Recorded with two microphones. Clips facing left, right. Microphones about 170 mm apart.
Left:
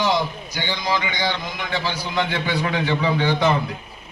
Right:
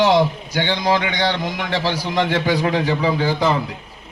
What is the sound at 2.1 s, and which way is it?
A man's voice, 40° right (ahead or behind).